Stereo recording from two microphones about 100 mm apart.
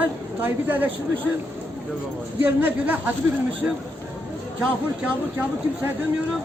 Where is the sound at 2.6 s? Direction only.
20° right (ahead or behind).